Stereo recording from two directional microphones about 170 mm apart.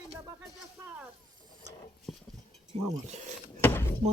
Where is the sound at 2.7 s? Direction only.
35° right (ahead or behind).